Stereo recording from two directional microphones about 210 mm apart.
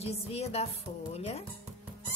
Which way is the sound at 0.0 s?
30° left (ahead or behind).